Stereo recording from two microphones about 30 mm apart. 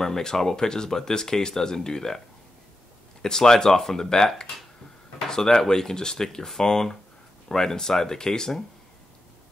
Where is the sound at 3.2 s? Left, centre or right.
Centre.